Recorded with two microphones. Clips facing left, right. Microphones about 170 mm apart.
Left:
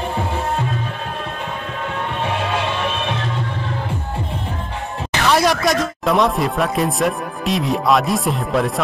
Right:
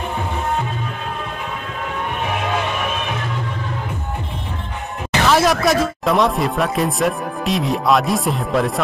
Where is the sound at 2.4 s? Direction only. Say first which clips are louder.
Even; 30° left (ahead or behind).